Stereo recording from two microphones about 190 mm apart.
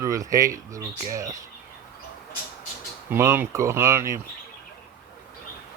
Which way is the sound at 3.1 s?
10° right (ahead or behind).